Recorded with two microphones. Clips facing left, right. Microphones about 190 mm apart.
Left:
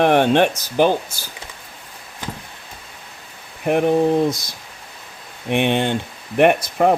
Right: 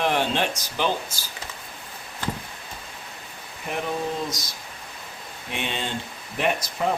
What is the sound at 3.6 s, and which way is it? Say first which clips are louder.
Speech: left 12 dB; 60° left (ahead or behind).